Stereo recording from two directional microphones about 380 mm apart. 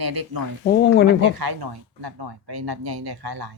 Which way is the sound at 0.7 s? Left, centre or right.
Left.